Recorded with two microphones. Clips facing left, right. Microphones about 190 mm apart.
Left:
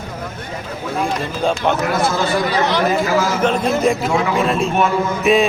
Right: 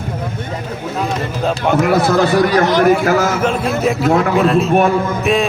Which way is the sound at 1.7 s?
65° right (ahead or behind).